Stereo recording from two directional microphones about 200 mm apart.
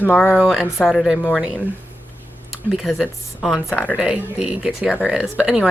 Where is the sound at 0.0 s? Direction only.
5° left (ahead or behind).